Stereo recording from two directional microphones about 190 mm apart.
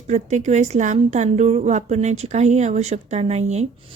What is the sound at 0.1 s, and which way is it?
A woman's voice, 40° right (ahead or behind).